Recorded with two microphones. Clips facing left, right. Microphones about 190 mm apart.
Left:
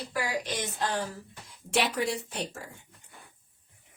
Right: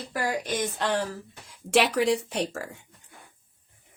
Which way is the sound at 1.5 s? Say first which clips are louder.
Right 6 dB; 80° right.